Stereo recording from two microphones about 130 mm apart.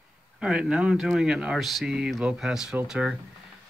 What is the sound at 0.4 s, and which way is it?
A man's voice, 5° right (ahead or behind).